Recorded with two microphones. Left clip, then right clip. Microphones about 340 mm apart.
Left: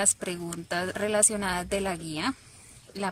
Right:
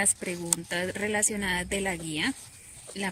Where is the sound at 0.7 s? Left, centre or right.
Left.